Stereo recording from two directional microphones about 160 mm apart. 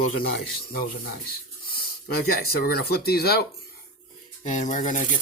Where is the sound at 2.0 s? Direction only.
70° left (ahead or behind).